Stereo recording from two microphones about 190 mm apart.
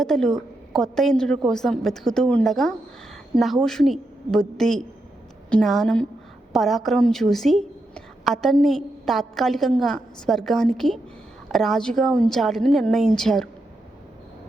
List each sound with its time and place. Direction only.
0.0 s a woman's voice: centre (ahead or behind)